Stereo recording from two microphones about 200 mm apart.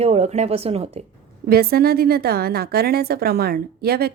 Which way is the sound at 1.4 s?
50° right (ahead or behind).